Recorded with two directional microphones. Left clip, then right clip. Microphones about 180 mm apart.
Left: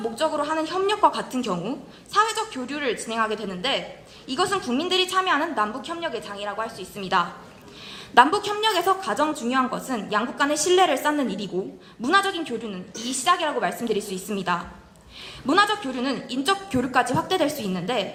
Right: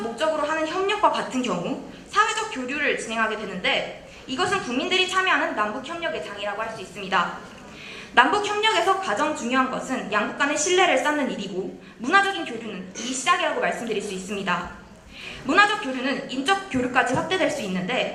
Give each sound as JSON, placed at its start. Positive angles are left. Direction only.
{"t": 0.2, "sound": "a woman's voice", "side_deg": 55}